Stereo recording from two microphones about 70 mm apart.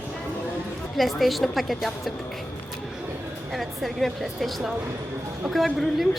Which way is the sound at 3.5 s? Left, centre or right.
Centre.